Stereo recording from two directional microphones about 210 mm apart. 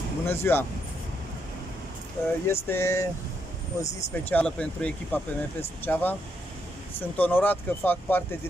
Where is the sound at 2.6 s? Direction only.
10° left (ahead or behind).